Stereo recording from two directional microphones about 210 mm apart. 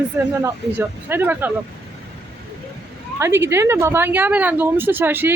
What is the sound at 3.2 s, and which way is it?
Speech, 10° right (ahead or behind).